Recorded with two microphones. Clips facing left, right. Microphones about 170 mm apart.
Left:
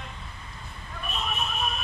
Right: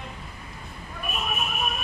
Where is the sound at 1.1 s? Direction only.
10° right (ahead or behind).